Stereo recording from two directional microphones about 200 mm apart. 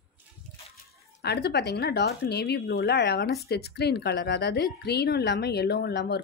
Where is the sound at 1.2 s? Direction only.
55° left (ahead or behind).